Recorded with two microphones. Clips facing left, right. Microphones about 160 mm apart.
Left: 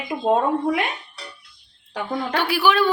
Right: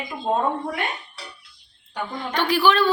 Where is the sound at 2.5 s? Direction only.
10° left (ahead or behind).